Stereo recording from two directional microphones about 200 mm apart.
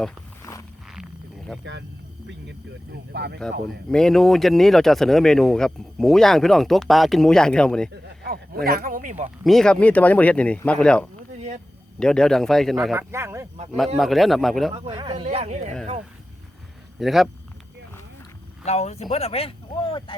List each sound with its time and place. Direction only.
0.9 s a sound: centre (ahead or behind)
3.1 s speech: 55° right (ahead or behind)
3.8 s speech: 5° left (ahead or behind)
8.0 s speech: 55° right (ahead or behind); by 9.3 s 40° right (ahead or behind)
9.4 s speech: centre (ahead or behind)
12.9 s speech: 10° right (ahead or behind)
13.7 s speech: centre (ahead or behind)
14.8 s speech: 25° right (ahead or behind)
17.0 s speech: centre (ahead or behind)
18.6 s speech: 35° left (ahead or behind)